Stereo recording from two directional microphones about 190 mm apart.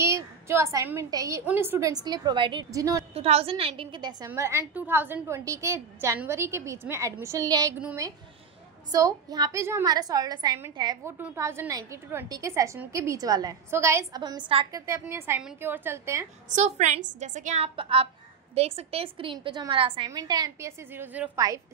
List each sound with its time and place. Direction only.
0.0 s a woman's voice: 15° right (ahead or behind)
3.2 s a woman's voice: 30° right (ahead or behind)
4.3 s a woman's voice: 15° right (ahead or behind)
16.4 s a woman's voice: 35° right (ahead or behind)
17.7 s a woman's voice: 30° right (ahead or behind); by 21.3 s 10° right (ahead or behind)